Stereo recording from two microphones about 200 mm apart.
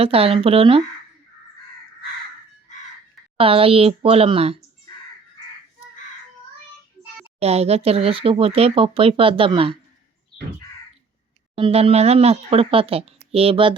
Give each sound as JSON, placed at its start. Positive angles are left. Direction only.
{"t": 0.0, "sound": "speech", "side_deg": -30}
{"t": 3.3, "sound": "speech", "side_deg": -25}
{"t": 7.3, "sound": "speech", "side_deg": -30}
{"t": 11.5, "sound": "speech", "side_deg": -30}